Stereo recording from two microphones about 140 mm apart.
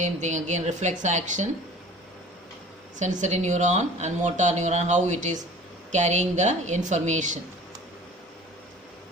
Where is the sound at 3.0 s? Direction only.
60° right (ahead or behind).